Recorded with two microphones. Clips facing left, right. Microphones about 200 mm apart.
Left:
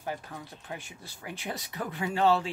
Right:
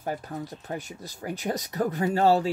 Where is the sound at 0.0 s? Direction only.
45° right (ahead or behind).